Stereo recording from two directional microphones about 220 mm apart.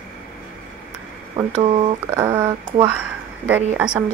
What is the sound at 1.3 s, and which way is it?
Speech, 25° right (ahead or behind).